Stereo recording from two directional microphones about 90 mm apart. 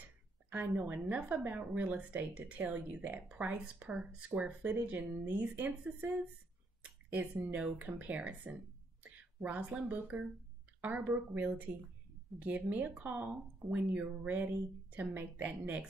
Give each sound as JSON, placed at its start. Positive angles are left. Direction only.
{"t": 0.7, "sound": "a woman's voice", "side_deg": -25}
{"t": 6.8, "sound": "a sound", "side_deg": -20}
{"t": 7.5, "sound": "a woman's voice", "side_deg": -15}